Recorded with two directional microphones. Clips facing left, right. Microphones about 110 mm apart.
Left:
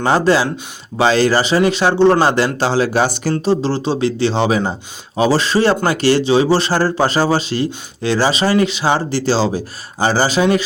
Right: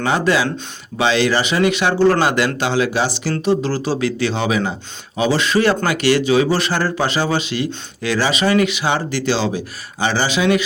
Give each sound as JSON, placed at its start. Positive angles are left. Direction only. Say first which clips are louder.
{"t": 0.0, "sound": "speech", "louder": "left 3 dB", "side_deg": 35}
{"t": 3.4, "sound": "speech", "louder": "even", "side_deg": 30}